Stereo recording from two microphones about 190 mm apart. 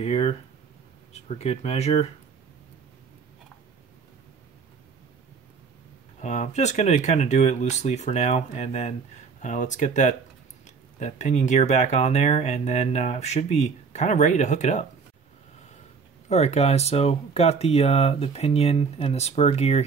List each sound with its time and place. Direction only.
0.0 s speech: 30° left (ahead or behind)
6.2 s speech: 35° left (ahead or behind)
16.3 s speech: 35° left (ahead or behind)